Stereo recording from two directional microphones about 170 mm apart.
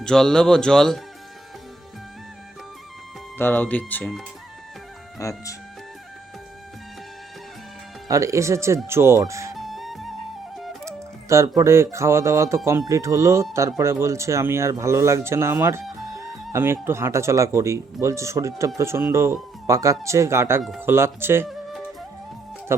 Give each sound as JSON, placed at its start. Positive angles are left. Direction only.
{"t": 0.0, "sound": "speech", "side_deg": 5}
{"t": 3.3, "sound": "speech", "side_deg": 10}
{"t": 5.2, "sound": "speech", "side_deg": 20}
{"t": 8.0, "sound": "speech", "side_deg": -20}
{"t": 9.6, "sound": "music", "side_deg": 0}
{"t": 10.8, "sound": "speech", "side_deg": -15}
{"t": 20.6, "sound": "speech", "side_deg": 0}
{"t": 20.8, "sound": "speech", "side_deg": -15}